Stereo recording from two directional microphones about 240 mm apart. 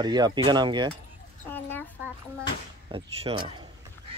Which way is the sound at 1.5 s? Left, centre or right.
Centre.